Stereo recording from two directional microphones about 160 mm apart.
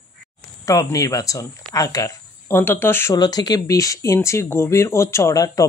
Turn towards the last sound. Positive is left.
turn(degrees=20)  # may be behind; listen again after turning